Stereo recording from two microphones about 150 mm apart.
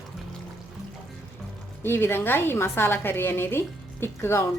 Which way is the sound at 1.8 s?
15° left (ahead or behind).